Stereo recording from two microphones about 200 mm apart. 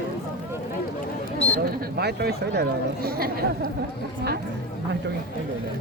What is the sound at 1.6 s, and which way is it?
Speech, 50° right (ahead or behind).